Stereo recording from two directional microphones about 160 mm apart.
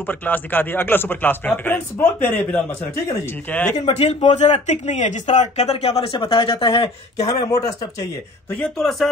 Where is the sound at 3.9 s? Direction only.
40° left (ahead or behind).